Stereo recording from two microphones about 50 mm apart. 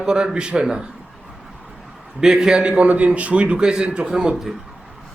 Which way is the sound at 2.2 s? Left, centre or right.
Centre.